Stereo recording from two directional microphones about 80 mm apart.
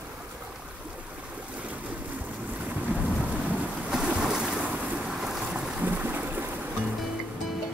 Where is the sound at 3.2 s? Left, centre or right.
Centre.